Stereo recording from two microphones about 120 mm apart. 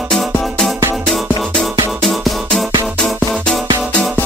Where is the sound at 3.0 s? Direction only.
Centre (ahead or behind).